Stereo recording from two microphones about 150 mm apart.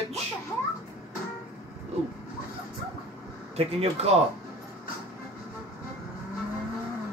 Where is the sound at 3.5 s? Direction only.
45° right (ahead or behind).